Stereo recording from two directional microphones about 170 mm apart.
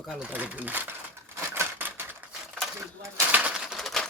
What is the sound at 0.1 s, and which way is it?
Speech, 5° right (ahead or behind).